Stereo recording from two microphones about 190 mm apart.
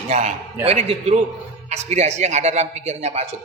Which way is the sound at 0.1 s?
35° right (ahead or behind).